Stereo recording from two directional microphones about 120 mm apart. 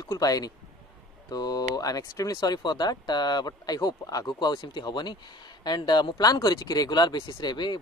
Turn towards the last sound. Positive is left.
turn(degrees=40)  # may be behind; listen again after turning